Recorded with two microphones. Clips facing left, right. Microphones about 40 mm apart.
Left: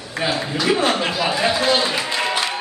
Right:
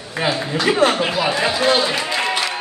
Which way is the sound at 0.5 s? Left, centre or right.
Right.